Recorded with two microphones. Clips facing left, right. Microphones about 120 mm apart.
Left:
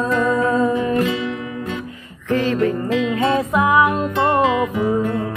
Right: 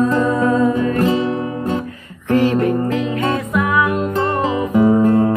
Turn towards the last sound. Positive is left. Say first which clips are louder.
# right 7 dB
turn(degrees=-40)  # may be behind; listen again after turning